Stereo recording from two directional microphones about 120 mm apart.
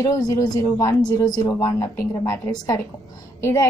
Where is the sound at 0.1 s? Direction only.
30° left (ahead or behind).